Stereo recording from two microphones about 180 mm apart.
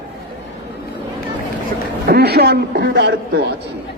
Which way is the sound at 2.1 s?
60° right (ahead or behind).